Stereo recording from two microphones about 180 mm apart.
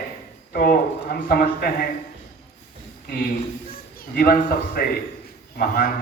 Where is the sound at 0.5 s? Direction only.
55° left (ahead or behind).